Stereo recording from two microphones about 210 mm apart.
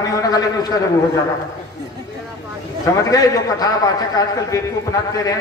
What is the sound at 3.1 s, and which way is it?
A man's voice, 20° left (ahead or behind).